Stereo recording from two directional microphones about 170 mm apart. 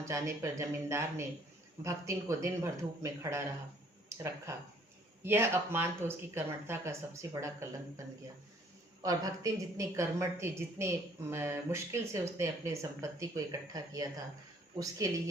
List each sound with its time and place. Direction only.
0.0 s speech: 20° right (ahead or behind)
5.2 s speech: 15° right (ahead or behind)
9.0 s a woman's voice: 20° right (ahead or behind)